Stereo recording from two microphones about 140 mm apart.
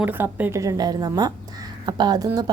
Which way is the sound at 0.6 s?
25° right (ahead or behind).